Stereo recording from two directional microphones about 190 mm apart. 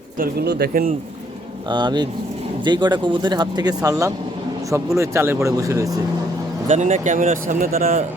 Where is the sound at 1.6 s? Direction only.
25° right (ahead or behind).